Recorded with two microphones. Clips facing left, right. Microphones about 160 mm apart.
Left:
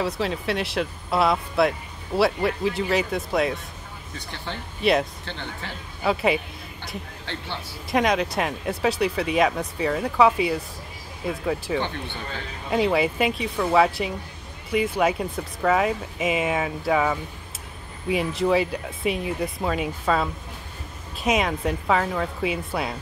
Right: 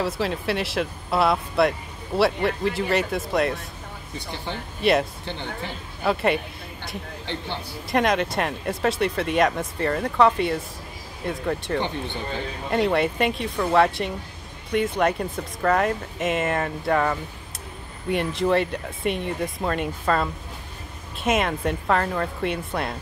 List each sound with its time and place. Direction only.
0.0 s speech: centre (ahead or behind)
4.5 s speech: 15° right (ahead or behind)
6.0 s speech: centre (ahead or behind)
7.2 s speech: 15° right (ahead or behind)
7.9 s speech: centre (ahead or behind)
11.8 s speech: 15° right (ahead or behind)
12.6 s speech: centre (ahead or behind)